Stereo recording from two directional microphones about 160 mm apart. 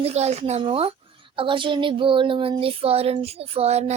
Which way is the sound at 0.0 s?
40° right (ahead or behind).